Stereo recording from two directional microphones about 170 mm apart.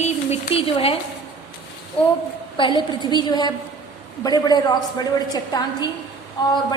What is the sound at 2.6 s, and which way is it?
A woman's voice, 25° left (ahead or behind).